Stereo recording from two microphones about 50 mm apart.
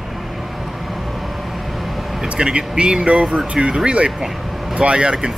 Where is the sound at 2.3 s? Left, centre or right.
Centre.